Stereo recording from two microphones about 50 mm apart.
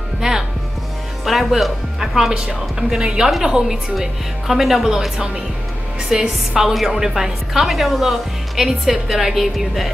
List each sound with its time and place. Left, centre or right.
0.2 s music: centre
1.2 s speech: centre
2.3 s a woman's voice: centre